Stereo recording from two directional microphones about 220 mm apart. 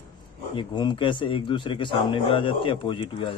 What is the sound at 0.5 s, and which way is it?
A man's voice, 20° left (ahead or behind).